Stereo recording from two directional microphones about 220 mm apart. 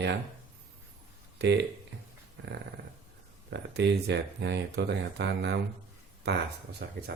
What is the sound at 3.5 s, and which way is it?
Speech, 50° right (ahead or behind).